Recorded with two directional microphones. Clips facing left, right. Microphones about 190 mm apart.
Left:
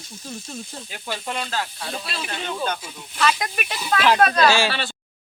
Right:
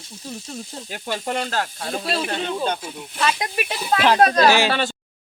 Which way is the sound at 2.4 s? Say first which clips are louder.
Right 3 dB; 30° right (ahead or behind).